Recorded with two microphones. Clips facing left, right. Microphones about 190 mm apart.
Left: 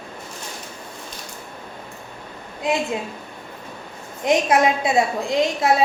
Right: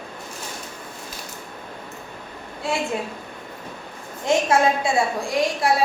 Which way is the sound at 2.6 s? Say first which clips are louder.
Left 4 dB; 15° left (ahead or behind).